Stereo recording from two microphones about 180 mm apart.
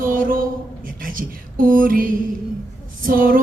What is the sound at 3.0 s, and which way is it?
Female singing, 50° right (ahead or behind).